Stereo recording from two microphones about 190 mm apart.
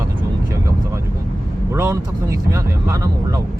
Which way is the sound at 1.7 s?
15° right (ahead or behind).